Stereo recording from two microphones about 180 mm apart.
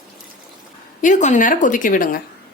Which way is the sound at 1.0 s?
45° left (ahead or behind).